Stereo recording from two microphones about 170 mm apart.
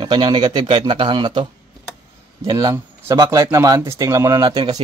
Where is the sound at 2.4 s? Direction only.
20° right (ahead or behind).